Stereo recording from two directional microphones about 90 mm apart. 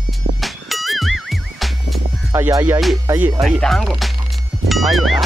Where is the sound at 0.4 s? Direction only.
Centre (ahead or behind).